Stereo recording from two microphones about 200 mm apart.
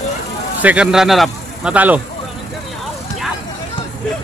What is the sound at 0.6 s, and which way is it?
A man's voice, 5° right (ahead or behind).